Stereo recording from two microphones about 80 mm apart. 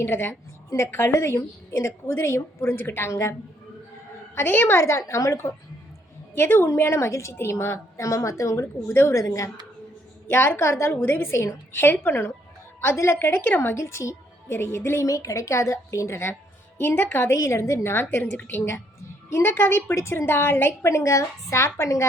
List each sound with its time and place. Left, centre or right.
0.0 s a woman's voice: left
4.4 s a woman's voice: left
4.8 s a woman's voice: left
8.9 s a woman's voice: left
9.1 s a woman's voice: left
10.2 s a woman's voice: left
15.0 s a woman's voice: left